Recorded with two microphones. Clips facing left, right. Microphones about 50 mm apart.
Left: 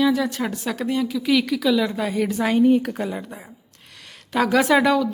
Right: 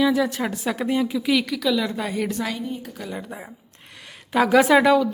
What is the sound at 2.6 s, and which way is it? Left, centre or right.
Speech, left.